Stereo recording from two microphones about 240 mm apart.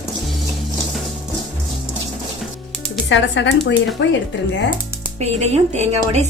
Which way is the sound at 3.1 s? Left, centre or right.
Left.